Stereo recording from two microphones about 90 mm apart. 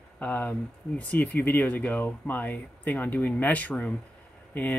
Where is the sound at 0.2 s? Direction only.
20° left (ahead or behind).